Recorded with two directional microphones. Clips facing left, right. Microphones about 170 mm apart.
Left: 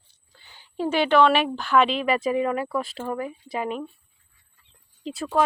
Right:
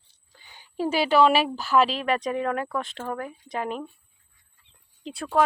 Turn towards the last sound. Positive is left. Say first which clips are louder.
# even
turn(degrees=0)  # may be behind; listen again after turning